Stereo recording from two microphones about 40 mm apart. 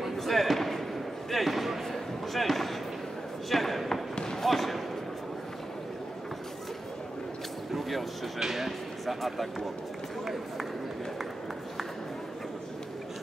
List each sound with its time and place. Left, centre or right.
0.0 s basketball bounce: centre
1.3 s a sound: centre
4.1 s basketball bounce: centre
4.5 s basketball bounce: centre
8.4 s speech: centre
10.2 s run: centre